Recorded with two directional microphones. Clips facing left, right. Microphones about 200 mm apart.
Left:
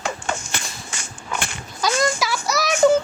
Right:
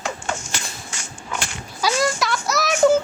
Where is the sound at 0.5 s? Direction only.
55° left (ahead or behind).